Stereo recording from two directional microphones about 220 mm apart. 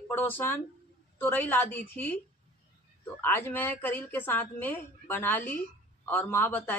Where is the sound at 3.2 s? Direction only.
10° left (ahead or behind).